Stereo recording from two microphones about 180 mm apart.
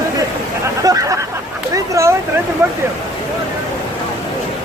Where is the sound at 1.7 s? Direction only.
15° right (ahead or behind).